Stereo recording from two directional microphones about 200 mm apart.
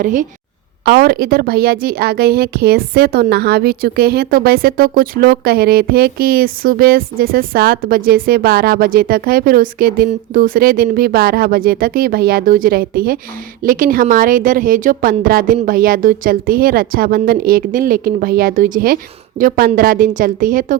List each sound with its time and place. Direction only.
0.0 s a woman's voice: 40° right (ahead or behind)